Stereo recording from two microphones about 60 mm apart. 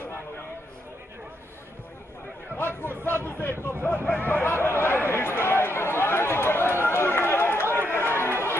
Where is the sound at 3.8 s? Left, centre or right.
Left.